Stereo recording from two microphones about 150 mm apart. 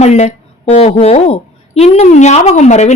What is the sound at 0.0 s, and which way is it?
A woman's voice, 50° left (ahead or behind).